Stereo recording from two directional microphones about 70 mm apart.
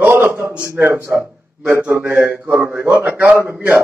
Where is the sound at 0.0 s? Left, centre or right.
Right.